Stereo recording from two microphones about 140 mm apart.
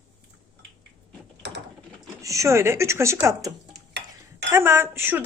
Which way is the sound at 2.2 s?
25° right (ahead or behind).